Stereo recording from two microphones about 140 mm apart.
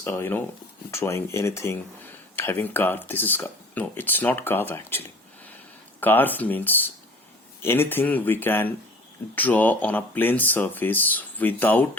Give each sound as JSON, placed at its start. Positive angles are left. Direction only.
{"t": 0.0, "sound": "speech", "side_deg": 15}